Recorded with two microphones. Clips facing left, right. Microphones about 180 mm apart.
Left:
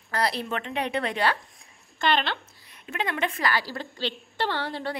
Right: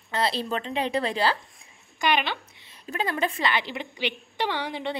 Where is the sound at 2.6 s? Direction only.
30° right (ahead or behind).